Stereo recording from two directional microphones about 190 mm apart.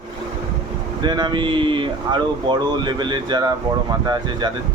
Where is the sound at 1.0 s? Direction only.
25° right (ahead or behind).